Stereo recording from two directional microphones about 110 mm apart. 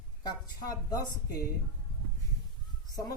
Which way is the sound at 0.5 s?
35° left (ahead or behind).